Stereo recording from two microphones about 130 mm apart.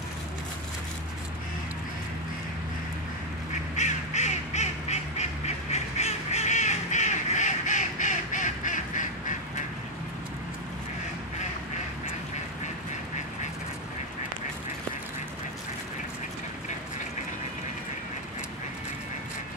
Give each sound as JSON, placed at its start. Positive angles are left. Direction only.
{"t": 3.7, "sound": "duck", "side_deg": 65}
{"t": 5.7, "sound": "crow", "side_deg": 60}